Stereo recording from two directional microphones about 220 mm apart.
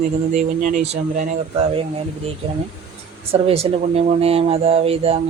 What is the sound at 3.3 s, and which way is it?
Mantra, 25° right (ahead or behind).